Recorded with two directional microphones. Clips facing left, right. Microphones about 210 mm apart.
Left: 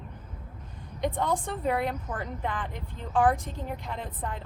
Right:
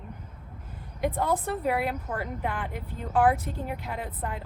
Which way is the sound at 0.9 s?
5° right (ahead or behind).